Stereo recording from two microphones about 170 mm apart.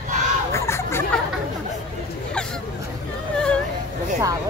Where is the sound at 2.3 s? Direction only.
5° left (ahead or behind).